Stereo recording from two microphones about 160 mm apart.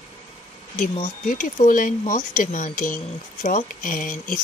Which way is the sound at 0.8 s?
55° left (ahead or behind).